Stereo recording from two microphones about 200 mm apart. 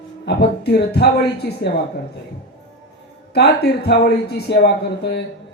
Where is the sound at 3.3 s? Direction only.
55° left (ahead or behind).